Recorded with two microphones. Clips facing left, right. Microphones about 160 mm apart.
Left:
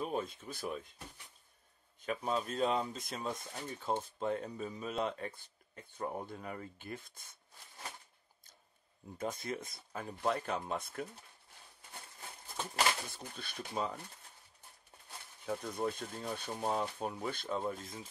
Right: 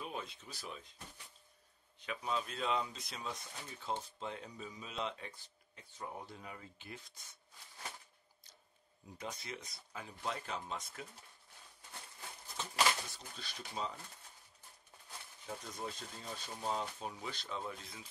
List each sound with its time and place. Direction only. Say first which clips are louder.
0.0 s speech: left 7 dB; 45° left (ahead or behind)
9.2 s speech: left 7 dB; 50° left (ahead or behind)
12.6 s a sound: left 4 dB; 50° left (ahead or behind)
13.1 s speech: left 4 dB; 55° left (ahead or behind)
15.4 s speech: left 8 dB; 55° left (ahead or behind)